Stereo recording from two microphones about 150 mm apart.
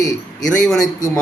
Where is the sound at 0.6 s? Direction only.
Centre (ahead or behind).